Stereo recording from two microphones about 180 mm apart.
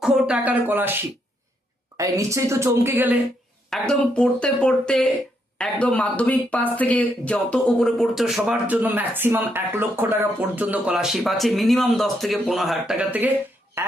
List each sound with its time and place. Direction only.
0.0 s speech: 5° right (ahead or behind)
2.0 s speech: 15° right (ahead or behind)
3.7 s speech: 5° left (ahead or behind); by 13.9 s 15° right (ahead or behind)